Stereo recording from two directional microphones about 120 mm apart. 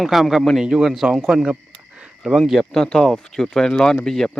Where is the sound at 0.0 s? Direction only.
Centre (ahead or behind).